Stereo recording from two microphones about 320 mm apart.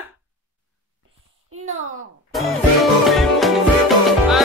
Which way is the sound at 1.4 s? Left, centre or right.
Right.